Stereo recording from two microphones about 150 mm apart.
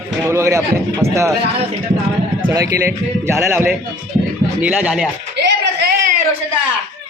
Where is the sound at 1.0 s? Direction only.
45° right (ahead or behind).